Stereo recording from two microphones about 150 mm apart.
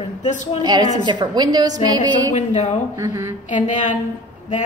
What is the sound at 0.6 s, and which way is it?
A woman's voice, 25° right (ahead or behind).